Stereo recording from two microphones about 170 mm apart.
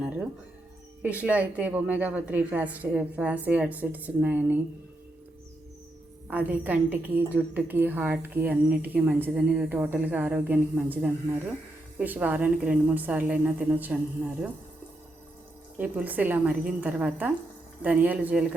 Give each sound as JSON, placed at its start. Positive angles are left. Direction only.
{"t": 1.0, "sound": "a woman's voice", "side_deg": -10}
{"t": 6.3, "sound": "a woman's voice", "side_deg": -10}
{"t": 15.8, "sound": "a woman's voice", "side_deg": -10}